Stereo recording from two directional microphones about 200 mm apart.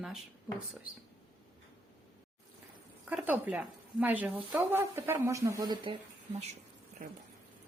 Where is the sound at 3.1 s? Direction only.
10° right (ahead or behind).